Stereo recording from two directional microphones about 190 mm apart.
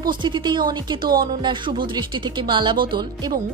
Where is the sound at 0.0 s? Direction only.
25° right (ahead or behind).